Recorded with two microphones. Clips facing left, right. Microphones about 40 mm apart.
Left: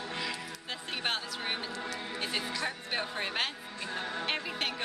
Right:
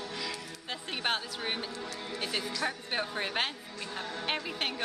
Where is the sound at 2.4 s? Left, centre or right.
Left.